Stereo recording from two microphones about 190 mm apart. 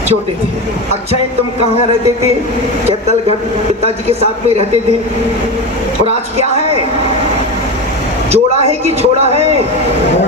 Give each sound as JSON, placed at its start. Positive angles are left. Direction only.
{"t": 8.3, "sound": "speech", "side_deg": -35}